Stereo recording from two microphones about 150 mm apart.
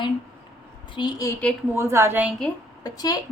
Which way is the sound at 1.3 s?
10° left (ahead or behind).